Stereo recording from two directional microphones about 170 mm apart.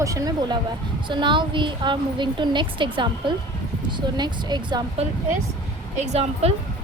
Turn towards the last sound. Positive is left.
turn(degrees=-40)  # may be behind; listen again after turning